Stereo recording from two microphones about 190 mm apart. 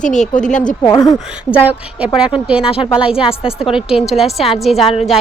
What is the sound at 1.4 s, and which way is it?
A woman's voice, 5° right (ahead or behind).